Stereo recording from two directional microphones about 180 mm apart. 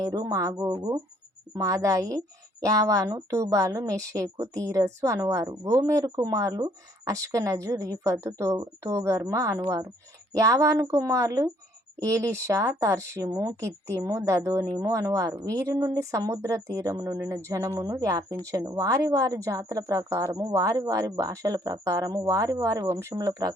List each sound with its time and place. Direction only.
0.0 s speech: 20° right (ahead or behind)